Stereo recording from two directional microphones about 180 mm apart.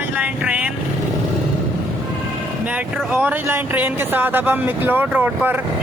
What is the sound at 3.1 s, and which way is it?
Speech, 10° right (ahead or behind).